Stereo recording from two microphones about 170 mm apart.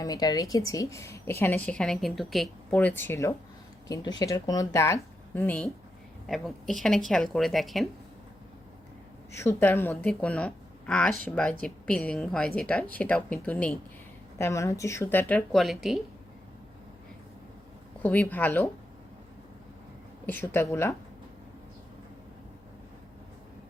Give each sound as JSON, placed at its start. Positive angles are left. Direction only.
{"t": 0.0, "sound": "a woman's voice", "side_deg": 20}
{"t": 9.3, "sound": "a woman's voice", "side_deg": 15}
{"t": 18.0, "sound": "a woman's voice", "side_deg": 10}
{"t": 20.2, "sound": "a woman's voice", "side_deg": 15}